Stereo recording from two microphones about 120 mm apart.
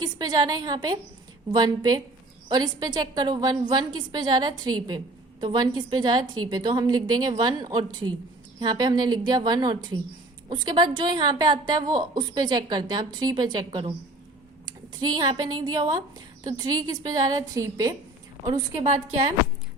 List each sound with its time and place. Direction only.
0.0 s a woman's voice: 35° right (ahead or behind)
15.0 s a woman's voice: 35° right (ahead or behind)